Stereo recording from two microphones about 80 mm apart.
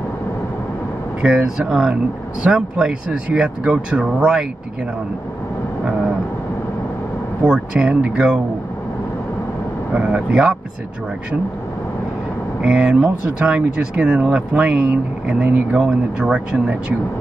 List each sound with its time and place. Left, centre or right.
1.2 s speech: centre
7.4 s speech: centre
9.9 s speech: centre
12.6 s speech: centre